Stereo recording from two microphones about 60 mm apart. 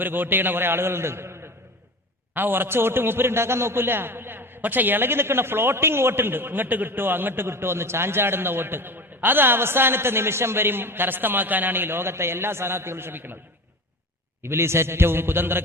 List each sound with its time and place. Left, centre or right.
0.0 s a man's voice: right
2.3 s a man's voice: right
14.4 s a man's voice: right